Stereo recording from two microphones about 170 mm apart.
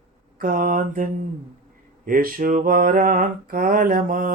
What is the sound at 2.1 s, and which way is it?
Speech, 55° right (ahead or behind).